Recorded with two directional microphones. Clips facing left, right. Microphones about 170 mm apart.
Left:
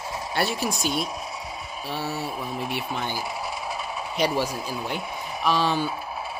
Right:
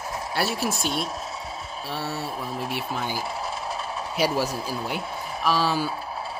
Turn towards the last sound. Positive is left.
turn(degrees=-5)  # may be behind; listen again after turning